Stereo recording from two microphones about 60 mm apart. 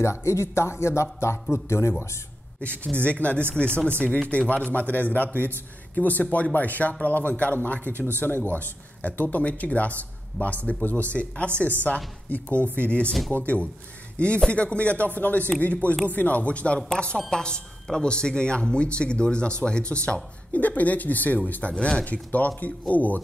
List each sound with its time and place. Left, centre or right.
0.0 s speech: left
2.8 s a man's voice: left
22.0 s speech: left